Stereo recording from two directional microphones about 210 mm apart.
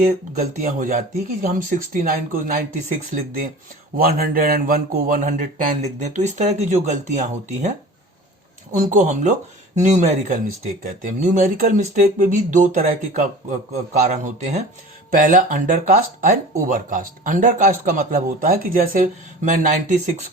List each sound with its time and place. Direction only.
0.3 s speech: 35° right (ahead or behind)
3.9 s speech: 45° right (ahead or behind)
8.7 s speech: 35° right (ahead or behind)